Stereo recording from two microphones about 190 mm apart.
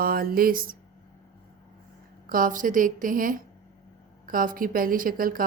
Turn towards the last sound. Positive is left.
turn(degrees=-50)  # may be behind; listen again after turning